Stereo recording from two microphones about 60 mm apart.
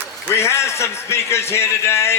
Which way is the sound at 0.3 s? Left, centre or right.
Left.